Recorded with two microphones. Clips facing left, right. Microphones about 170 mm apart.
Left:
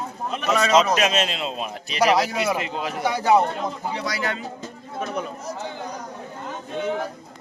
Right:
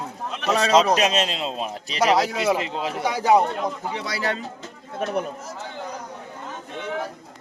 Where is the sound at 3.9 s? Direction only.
25° right (ahead or behind).